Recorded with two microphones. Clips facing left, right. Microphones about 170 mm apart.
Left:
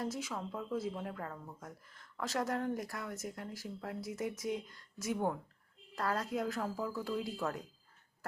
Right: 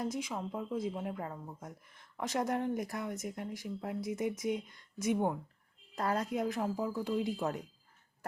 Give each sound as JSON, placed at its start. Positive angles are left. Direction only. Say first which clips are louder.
{"t": 0.0, "sound": "speech", "louder": "right 2 dB", "side_deg": -15}